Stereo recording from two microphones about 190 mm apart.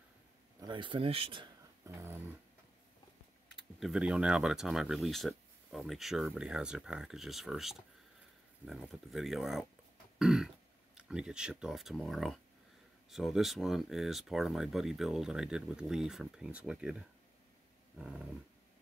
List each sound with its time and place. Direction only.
0.6 s speech: 25° right (ahead or behind)
1.9 s dog: 15° right (ahead or behind)
3.8 s speech: 5° right (ahead or behind)
10.1 s throat clearing: 5° right (ahead or behind)
11.0 s speech: 5° right (ahead or behind)
17.9 s speech: 5° right (ahead or behind)